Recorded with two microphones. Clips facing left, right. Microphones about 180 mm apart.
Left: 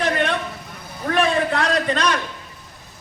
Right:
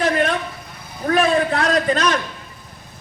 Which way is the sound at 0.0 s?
40° right (ahead or behind).